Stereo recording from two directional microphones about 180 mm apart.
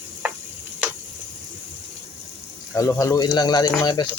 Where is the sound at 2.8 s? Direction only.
20° left (ahead or behind).